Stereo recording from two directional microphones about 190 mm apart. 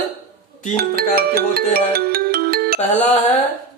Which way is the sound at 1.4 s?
55° right (ahead or behind).